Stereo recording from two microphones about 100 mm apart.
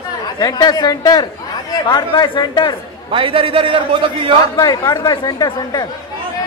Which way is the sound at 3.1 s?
65° right (ahead or behind).